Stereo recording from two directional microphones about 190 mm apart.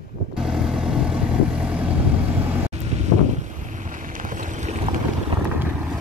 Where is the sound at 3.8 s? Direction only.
45° right (ahead or behind).